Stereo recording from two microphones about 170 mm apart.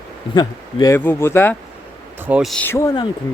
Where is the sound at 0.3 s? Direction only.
25° left (ahead or behind).